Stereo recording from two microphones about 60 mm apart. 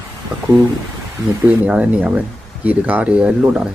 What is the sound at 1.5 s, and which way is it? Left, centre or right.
Speech, right.